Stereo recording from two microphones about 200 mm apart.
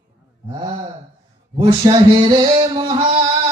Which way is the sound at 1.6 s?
25° right (ahead or behind).